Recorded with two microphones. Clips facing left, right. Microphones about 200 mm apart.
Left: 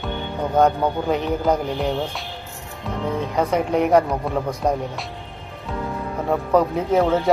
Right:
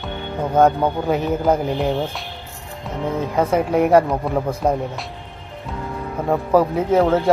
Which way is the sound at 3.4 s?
5° right (ahead or behind).